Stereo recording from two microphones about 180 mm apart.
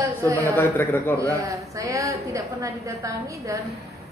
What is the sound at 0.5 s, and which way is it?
Speech, 10° left (ahead or behind).